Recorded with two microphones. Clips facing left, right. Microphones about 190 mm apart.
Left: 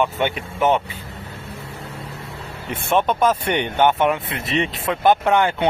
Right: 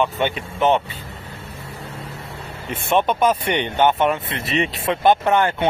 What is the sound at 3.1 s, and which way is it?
Speech, 5° right (ahead or behind).